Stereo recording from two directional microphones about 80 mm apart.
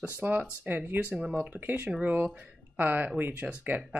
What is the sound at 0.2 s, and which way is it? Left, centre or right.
Speech, right.